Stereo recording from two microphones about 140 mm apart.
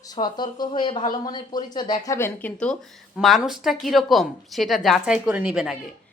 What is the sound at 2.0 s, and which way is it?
Speech, 20° left (ahead or behind).